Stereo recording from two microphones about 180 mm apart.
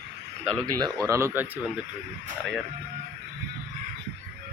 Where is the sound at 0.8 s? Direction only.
20° right (ahead or behind).